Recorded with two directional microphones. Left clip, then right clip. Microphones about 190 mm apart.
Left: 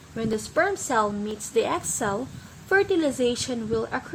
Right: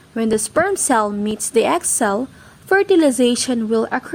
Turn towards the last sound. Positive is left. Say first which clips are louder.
# right 8 dB
turn(degrees=-35)  # may be behind; listen again after turning